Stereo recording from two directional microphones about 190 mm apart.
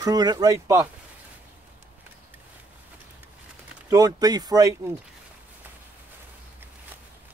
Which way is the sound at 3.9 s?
20° right (ahead or behind).